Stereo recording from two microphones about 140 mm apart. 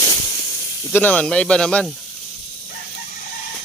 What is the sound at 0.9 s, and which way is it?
Speech, 10° left (ahead or behind).